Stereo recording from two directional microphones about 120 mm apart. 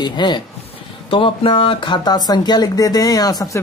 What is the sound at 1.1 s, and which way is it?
Speech, 50° left (ahead or behind).